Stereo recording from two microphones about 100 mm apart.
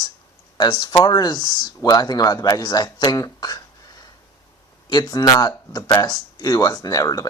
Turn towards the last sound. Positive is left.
turn(degrees=35)  # may be behind; listen again after turning